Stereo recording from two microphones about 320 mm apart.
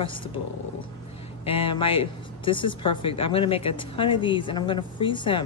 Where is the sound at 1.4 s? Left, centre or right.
Centre.